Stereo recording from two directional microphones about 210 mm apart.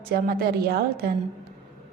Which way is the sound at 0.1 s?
45° right (ahead or behind).